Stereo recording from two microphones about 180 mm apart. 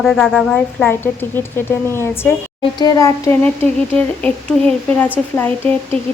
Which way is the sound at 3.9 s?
10° left (ahead or behind).